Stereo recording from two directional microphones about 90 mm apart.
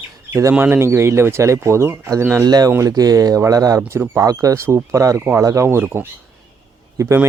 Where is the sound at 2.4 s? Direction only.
45° right (ahead or behind).